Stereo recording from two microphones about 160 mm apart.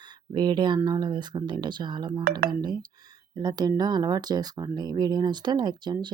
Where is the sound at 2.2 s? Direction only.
70° right (ahead or behind).